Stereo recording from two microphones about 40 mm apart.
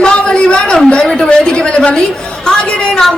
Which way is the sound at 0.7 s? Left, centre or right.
Centre.